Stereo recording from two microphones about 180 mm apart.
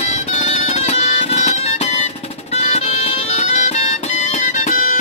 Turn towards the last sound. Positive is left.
turn(degrees=45)  # may be behind; listen again after turning